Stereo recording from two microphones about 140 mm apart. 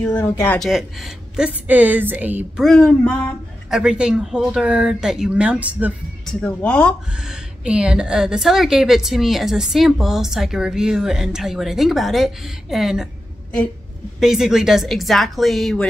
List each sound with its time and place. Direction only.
0.0 s speech: 15° left (ahead or behind)
0.6 s a woman's voice: centre (ahead or behind)
2.6 s a woman's voice: 5° left (ahead or behind)
3.7 s speech: 5° right (ahead or behind)
6.2 s speech: 10° left (ahead or behind)
7.2 s a woman's voice: 5° right (ahead or behind)
14.2 s a woman's voice: 5° right (ahead or behind)